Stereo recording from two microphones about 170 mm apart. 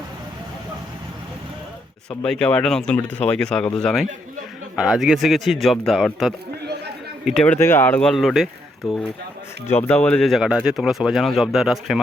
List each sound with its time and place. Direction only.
2.0 s speech: 5° left (ahead or behind)
9.6 s speech: 15° left (ahead or behind)